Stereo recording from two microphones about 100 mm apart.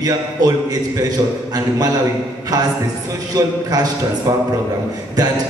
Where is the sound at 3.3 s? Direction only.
40° right (ahead or behind).